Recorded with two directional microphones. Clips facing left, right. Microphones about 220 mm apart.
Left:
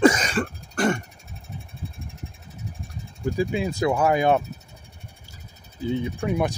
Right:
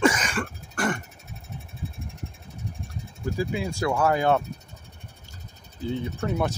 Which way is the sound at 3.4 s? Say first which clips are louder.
Left 4 dB; 20° left (ahead or behind).